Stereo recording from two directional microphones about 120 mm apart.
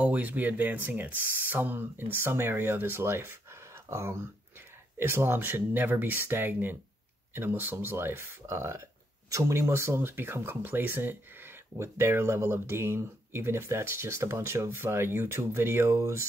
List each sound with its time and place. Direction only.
0.0 s speech: 10° right (ahead or behind)